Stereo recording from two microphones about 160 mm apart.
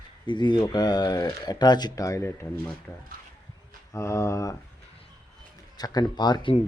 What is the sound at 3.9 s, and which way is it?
Speech, 20° left (ahead or behind).